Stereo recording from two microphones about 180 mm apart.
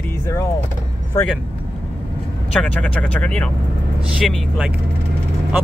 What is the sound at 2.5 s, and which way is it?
Speech, 5° left (ahead or behind).